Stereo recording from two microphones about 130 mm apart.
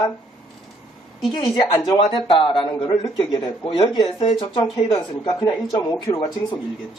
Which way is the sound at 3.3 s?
30° left (ahead or behind).